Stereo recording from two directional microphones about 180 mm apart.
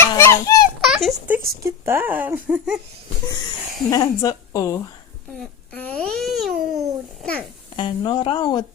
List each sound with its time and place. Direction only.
0.0 s children playing: 15° left (ahead or behind)
0.8 s a sound: centre (ahead or behind)
1.6 s speech: 15° right (ahead or behind)
3.8 s a woman's voice: 20° left (ahead or behind)
5.4 s babbling: 10° left (ahead or behind)
7.2 s a child's voice: 5° left (ahead or behind)
7.8 s a woman's voice: 25° left (ahead or behind)